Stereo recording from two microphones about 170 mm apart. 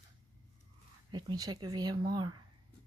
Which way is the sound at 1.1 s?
25° right (ahead or behind).